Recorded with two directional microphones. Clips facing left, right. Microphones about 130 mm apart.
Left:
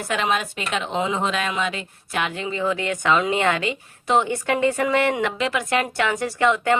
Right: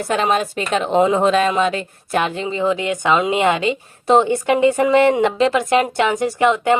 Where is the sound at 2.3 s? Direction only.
25° right (ahead or behind).